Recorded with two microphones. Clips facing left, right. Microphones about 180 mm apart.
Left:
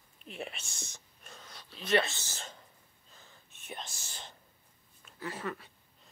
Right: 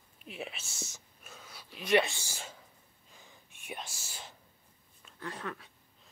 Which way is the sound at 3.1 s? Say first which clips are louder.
Right 1 dB; 15° right (ahead or behind).